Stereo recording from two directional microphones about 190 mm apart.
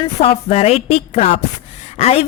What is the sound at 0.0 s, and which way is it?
A woman's voice, 30° left (ahead or behind).